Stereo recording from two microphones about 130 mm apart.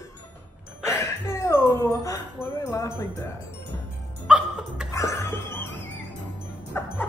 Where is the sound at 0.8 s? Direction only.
20° left (ahead or behind).